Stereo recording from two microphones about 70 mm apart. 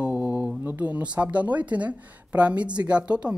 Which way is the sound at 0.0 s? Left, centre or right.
Centre.